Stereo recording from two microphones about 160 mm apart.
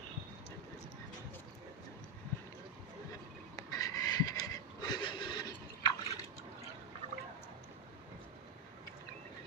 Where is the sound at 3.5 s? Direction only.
20° left (ahead or behind).